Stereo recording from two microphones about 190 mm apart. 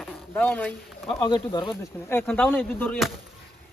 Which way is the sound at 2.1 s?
10° left (ahead or behind).